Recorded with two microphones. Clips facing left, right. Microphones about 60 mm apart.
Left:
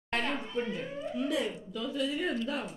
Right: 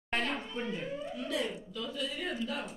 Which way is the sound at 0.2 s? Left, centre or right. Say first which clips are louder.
Left 2 dB; centre.